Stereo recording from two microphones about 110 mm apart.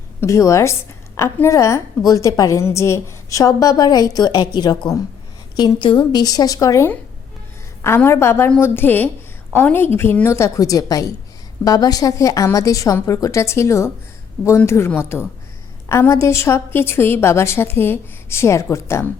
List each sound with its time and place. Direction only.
0.2 s a woman's voice: 30° left (ahead or behind)